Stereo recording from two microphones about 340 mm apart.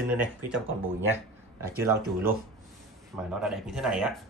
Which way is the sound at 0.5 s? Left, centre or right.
Right.